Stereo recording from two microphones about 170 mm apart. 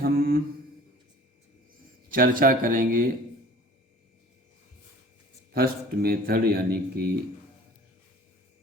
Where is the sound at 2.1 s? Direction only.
55° right (ahead or behind).